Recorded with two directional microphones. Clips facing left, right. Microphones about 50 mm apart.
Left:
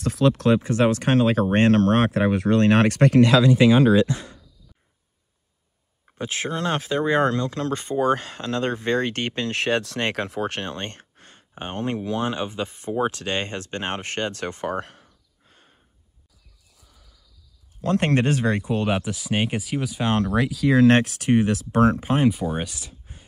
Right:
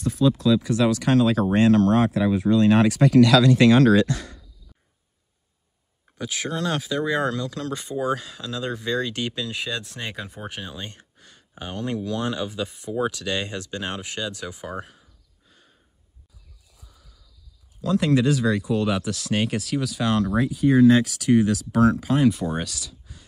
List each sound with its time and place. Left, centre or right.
0.0 s speech: left
0.6 s speech: left
3.2 s speech: left
3.4 s speech: centre
6.1 s speech: left
15.4 s a sound: left
17.8 s speech: left
19.1 s speech: centre
20.3 s speech: left
21.0 s speech: left
22.3 s speech: centre
22.8 s a sound: left